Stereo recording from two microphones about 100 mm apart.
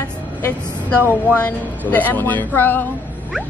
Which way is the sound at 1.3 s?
15° left (ahead or behind).